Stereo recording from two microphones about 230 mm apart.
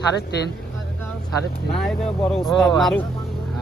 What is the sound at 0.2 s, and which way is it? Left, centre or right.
Speech, left.